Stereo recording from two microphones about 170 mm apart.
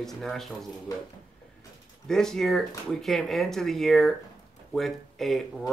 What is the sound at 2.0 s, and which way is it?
Speech, 5° left (ahead or behind).